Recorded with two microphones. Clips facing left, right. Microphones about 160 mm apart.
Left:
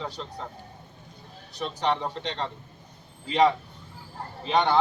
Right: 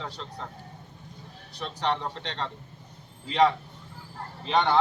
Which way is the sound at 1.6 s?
5° left (ahead or behind).